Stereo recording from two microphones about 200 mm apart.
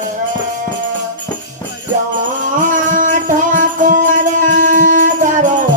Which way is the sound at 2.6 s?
40° right (ahead or behind).